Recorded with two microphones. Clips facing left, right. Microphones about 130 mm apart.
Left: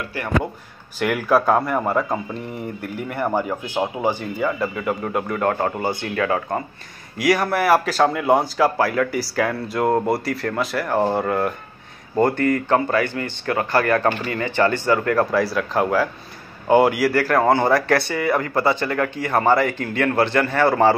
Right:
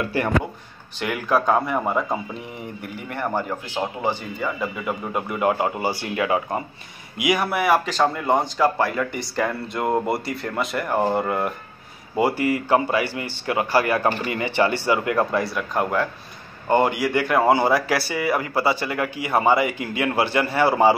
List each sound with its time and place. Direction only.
0.9 s speech: 5° left (ahead or behind); by 6.6 s 15° right (ahead or behind)
7.2 s speech: 5° right (ahead or behind)
15.1 s a man's voice: centre (ahead or behind)
17.3 s speech: 10° right (ahead or behind)